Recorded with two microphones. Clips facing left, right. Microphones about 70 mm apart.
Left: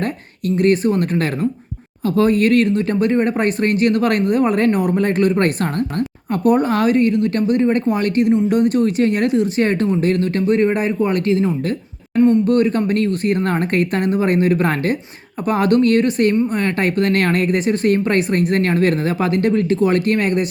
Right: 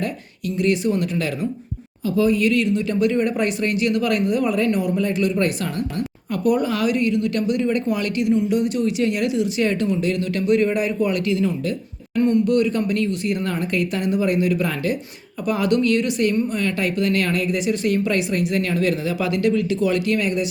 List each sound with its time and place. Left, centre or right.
0.0 s speech: left
12.1 s a man's voice: left
12.5 s speech: left